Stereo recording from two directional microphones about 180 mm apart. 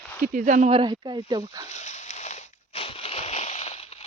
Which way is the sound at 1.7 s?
40° left (ahead or behind).